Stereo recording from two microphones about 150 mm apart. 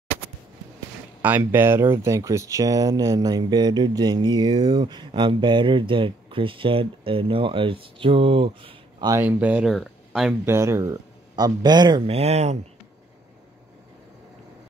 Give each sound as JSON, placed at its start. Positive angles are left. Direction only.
{"t": 1.2, "sound": "speech", "side_deg": -10}
{"t": 9.2, "sound": "speech", "side_deg": -10}
{"t": 10.4, "sound": "speech", "side_deg": -20}
{"t": 12.1, "sound": "speech", "side_deg": -45}